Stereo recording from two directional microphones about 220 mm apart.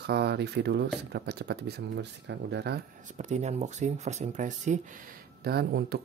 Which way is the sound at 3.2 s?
30° right (ahead or behind).